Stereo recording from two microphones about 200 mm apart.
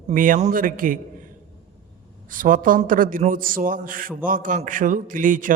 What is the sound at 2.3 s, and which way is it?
A man's voice, 40° right (ahead or behind).